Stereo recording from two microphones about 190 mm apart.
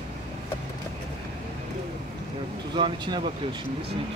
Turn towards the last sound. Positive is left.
turn(degrees=-25)  # may be behind; listen again after turning